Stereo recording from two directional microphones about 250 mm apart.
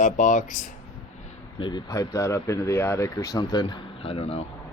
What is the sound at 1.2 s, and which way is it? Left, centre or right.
Speech, centre.